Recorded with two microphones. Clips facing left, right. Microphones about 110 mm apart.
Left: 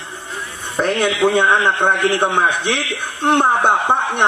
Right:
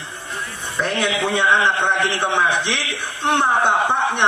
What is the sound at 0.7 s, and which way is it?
A man's voice, 50° left (ahead or behind).